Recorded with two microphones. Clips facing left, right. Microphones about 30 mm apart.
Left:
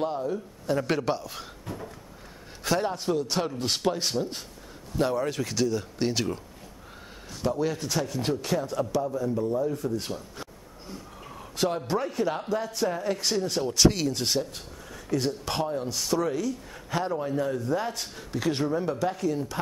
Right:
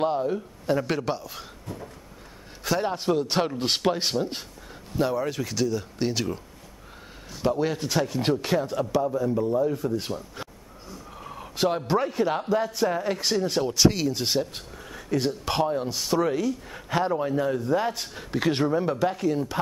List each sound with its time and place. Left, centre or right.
0.0 s a man's voice: right
0.7 s speech: centre
2.8 s a man's voice: right
4.9 s speech: centre
7.4 s a man's voice: right
13.7 s speech: centre